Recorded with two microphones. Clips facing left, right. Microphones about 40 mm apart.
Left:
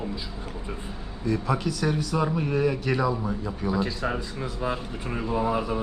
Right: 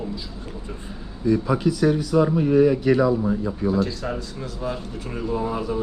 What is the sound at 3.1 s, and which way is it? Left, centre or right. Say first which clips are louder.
Speech: right 7 dB; centre.